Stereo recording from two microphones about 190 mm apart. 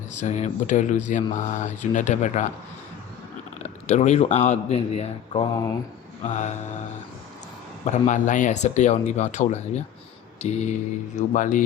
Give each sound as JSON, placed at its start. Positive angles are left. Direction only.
{"t": 0.1, "sound": "speech", "side_deg": 40}
{"t": 3.6, "sound": "speech", "side_deg": 35}
{"t": 7.9, "sound": "speech", "side_deg": 40}